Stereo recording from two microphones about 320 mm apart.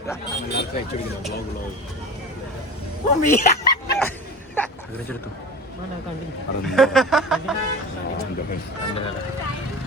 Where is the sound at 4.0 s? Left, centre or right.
Centre.